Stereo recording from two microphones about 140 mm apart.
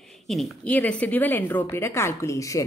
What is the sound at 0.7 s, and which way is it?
A woman's voice, 10° left (ahead or behind).